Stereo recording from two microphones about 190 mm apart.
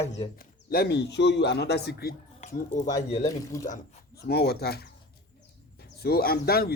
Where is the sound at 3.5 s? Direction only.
20° left (ahead or behind).